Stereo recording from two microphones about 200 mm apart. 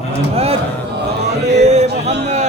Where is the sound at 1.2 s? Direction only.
35° right (ahead or behind).